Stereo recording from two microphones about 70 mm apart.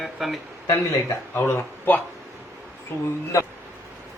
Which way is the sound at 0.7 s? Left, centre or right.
Left.